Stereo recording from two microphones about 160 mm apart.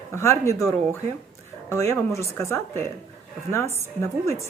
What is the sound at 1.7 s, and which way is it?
Speech, 15° left (ahead or behind).